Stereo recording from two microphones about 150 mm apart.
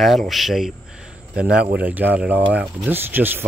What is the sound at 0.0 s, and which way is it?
Speech, centre (ahead or behind).